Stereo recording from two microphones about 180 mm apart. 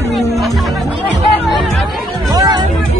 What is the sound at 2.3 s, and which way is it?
Music, 20° right (ahead or behind).